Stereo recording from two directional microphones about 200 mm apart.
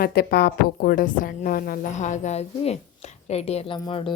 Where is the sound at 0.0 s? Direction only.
50° left (ahead or behind).